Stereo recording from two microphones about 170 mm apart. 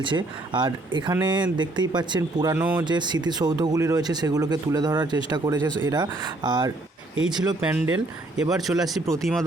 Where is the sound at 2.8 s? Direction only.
25° right (ahead or behind).